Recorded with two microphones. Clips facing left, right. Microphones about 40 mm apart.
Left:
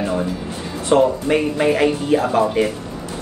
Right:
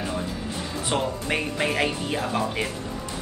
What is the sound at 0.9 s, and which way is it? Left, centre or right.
Speech, centre.